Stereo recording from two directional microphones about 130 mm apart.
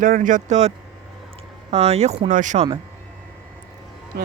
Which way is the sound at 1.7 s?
55° right (ahead or behind).